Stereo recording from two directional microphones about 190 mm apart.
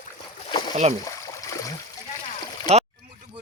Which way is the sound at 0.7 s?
40° right (ahead or behind).